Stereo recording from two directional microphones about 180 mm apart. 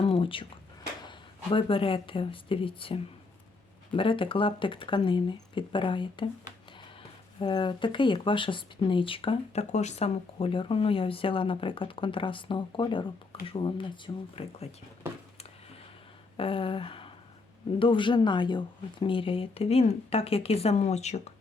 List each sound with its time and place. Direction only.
0.0 s a sound: 30° left (ahead or behind)
1.0 s speech: 30° left (ahead or behind)
7.3 s speech: 25° left (ahead or behind)
16.4 s speech: 30° left (ahead or behind)